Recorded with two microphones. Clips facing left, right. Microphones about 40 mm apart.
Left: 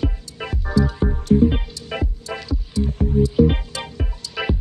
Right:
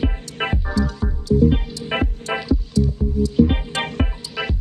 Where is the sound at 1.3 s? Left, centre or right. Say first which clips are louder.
Left 1 dB; left.